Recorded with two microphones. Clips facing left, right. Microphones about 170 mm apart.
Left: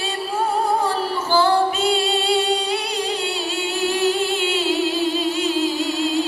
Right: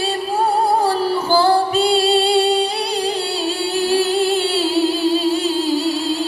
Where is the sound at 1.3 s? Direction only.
35° right (ahead or behind).